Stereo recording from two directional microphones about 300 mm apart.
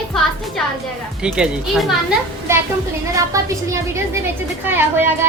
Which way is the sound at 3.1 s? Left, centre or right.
Centre.